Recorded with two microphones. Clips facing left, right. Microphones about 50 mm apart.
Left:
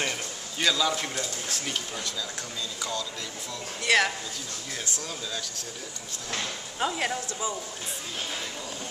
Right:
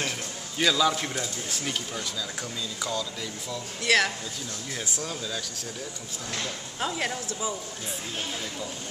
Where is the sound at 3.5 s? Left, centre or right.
Centre.